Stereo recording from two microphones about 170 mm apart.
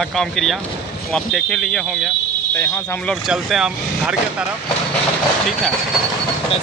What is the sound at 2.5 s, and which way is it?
Speech, 15° left (ahead or behind).